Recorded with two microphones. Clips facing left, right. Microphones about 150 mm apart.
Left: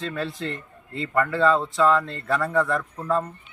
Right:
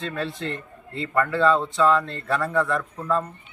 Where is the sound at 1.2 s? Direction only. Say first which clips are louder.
Even; centre (ahead or behind).